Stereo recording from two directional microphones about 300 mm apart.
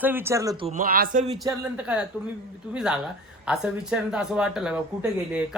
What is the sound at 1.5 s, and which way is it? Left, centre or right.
Speech, centre.